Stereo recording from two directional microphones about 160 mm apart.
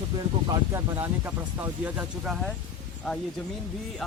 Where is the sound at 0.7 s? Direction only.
15° right (ahead or behind).